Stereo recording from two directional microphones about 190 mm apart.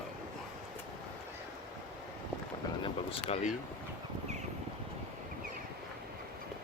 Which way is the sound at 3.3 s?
40° left (ahead or behind).